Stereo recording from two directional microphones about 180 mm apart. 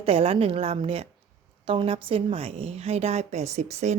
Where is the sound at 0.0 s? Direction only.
35° right (ahead or behind).